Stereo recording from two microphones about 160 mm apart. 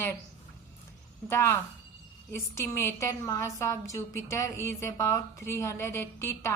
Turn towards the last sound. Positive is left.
turn(degrees=15)  # may be behind; listen again after turning